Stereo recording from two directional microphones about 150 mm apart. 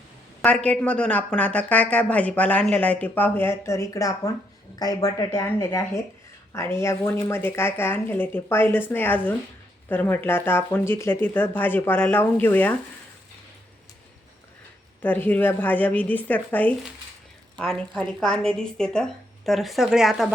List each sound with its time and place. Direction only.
0.4 s speech: 10° left (ahead or behind)
15.0 s speech: 10° left (ahead or behind)